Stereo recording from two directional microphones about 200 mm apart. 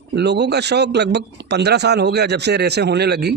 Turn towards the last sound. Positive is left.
turn(degrees=-55)  # may be behind; listen again after turning